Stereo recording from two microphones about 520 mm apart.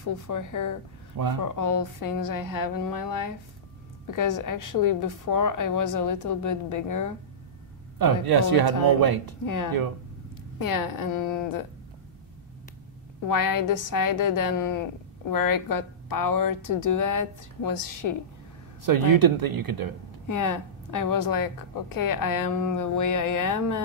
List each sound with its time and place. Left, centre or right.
0.0 s a woman's voice: left
8.0 s a man's voice: right
10.6 s a woman's voice: left
13.3 s a woman's voice: left
18.9 s speech: right
20.2 s a woman's voice: left